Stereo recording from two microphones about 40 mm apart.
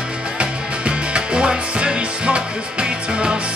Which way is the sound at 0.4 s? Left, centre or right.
Right.